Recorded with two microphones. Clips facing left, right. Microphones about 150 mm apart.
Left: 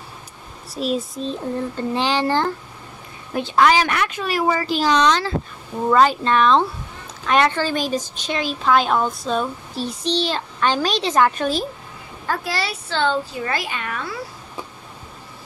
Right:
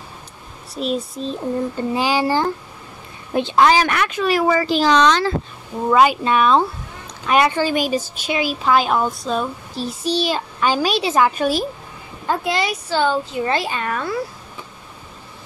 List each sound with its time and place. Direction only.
0.7 s a woman's voice: centre (ahead or behind)
3.3 s a woman's voice: 25° right (ahead or behind)
3.9 s speech: 90° right
5.9 s a woman's voice: 10° right (ahead or behind)
12.3 s a woman's voice: 20° right (ahead or behind)
13.2 s a child's voice: 20° right (ahead or behind); by 14.1 s 40° right (ahead or behind)